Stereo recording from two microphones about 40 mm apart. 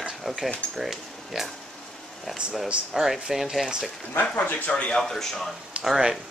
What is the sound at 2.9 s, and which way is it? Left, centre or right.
Speech, centre.